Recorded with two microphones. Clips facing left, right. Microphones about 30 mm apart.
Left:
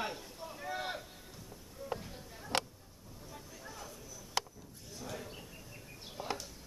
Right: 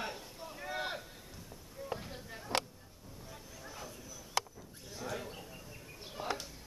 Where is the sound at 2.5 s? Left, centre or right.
Right.